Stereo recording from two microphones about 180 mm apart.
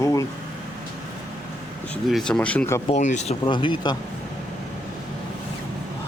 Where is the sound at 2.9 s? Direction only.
40° left (ahead or behind).